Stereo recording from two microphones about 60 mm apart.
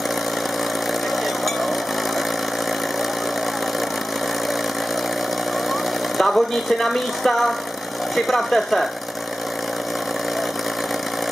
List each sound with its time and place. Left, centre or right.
6.1 s a woman's voice: centre